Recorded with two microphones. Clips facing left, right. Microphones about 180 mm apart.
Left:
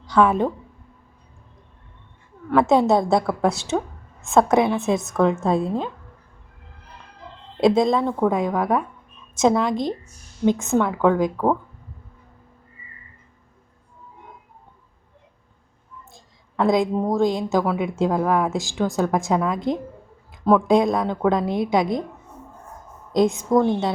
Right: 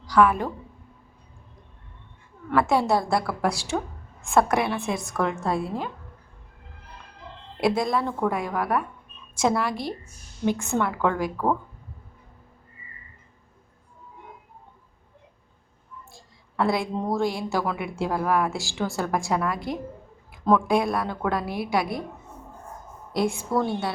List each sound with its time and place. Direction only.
0.0 s a woman's voice: 25° left (ahead or behind)
2.5 s a woman's voice: 20° left (ahead or behind)
7.6 s a woman's voice: 20° left (ahead or behind)
16.1 s a woman's voice: 15° left (ahead or behind)
23.1 s a woman's voice: 20° left (ahead or behind)